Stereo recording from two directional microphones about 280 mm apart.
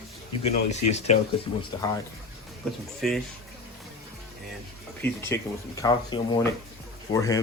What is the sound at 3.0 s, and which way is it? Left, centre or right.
Speech, centre.